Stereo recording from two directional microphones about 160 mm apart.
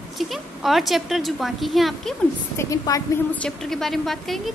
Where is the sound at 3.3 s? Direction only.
5° left (ahead or behind).